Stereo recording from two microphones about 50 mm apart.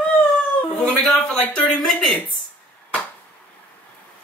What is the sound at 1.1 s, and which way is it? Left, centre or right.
Speech, centre.